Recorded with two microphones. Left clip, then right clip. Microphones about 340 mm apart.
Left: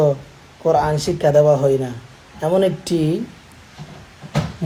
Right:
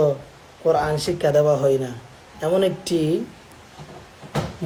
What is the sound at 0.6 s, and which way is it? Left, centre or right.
Speech, left.